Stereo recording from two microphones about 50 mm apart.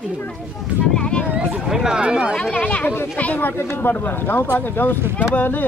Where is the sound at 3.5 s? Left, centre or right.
Left.